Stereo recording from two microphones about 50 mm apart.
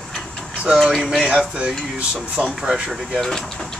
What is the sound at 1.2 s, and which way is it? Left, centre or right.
Speech, centre.